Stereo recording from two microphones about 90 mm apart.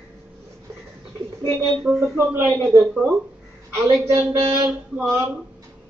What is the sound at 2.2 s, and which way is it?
Speech, 30° right (ahead or behind).